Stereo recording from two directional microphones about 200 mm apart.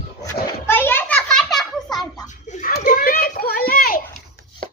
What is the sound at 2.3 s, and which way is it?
Children playing, 40° left (ahead or behind).